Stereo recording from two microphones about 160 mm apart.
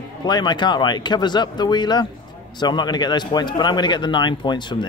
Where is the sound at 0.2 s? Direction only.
25° left (ahead or behind).